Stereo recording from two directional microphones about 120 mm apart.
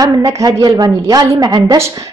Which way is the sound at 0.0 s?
30° right (ahead or behind).